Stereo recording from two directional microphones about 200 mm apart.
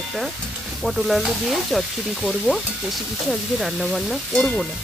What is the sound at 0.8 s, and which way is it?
Frying, centre (ahead or behind).